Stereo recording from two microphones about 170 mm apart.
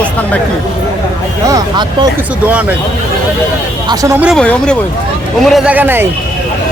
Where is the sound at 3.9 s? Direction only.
20° right (ahead or behind).